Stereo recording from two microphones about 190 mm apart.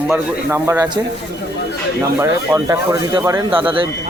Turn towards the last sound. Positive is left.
turn(degrees=-25)  # may be behind; listen again after turning